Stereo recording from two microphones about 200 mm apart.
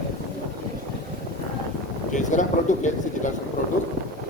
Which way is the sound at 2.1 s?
40° left (ahead or behind).